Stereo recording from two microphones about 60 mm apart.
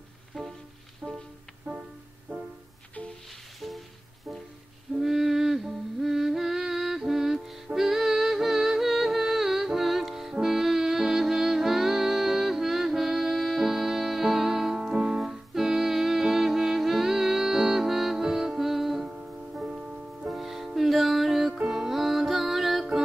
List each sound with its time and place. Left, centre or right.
0.3 s music: centre
1.0 s music: centre
2.3 s music: right
4.9 s music: centre
20.2 s music: centre